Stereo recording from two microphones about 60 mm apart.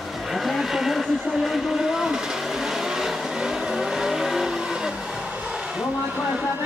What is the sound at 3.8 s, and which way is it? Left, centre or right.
Vehicle, centre.